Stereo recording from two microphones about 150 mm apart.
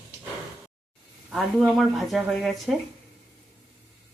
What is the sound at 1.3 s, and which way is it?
Speech, centre (ahead or behind).